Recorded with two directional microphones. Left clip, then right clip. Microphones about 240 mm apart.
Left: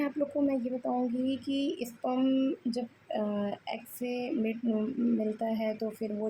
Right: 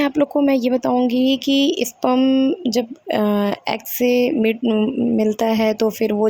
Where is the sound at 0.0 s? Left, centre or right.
Right.